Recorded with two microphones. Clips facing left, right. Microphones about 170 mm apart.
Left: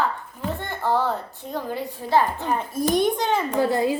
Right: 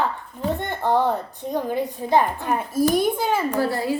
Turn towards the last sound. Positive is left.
turn(degrees=20)  # may be behind; listen again after turning